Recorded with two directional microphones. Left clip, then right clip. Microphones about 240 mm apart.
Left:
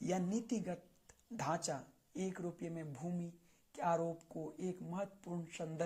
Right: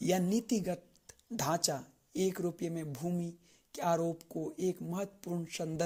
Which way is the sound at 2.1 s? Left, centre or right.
Right.